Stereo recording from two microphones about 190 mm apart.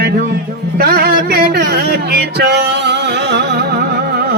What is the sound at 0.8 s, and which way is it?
Music, 55° right (ahead or behind).